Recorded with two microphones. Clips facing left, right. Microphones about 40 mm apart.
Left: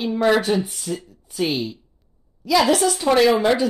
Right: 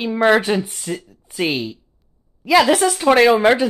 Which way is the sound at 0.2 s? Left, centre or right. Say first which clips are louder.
Right 3 dB; right.